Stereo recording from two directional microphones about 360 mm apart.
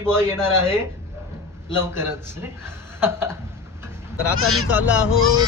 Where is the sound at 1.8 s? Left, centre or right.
Centre.